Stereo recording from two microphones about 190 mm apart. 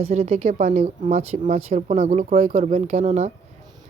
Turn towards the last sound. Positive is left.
turn(degrees=-35)  # may be behind; listen again after turning